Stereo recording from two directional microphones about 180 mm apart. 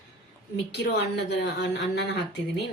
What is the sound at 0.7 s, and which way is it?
Speech, 70° left (ahead or behind).